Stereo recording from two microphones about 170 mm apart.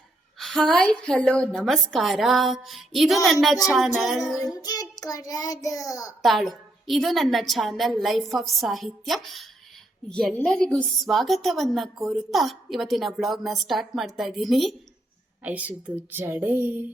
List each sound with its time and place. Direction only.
0.3 s a woman's voice: centre (ahead or behind)
4.5 s child singing: 20° left (ahead or behind)
6.2 s a woman's voice: centre (ahead or behind)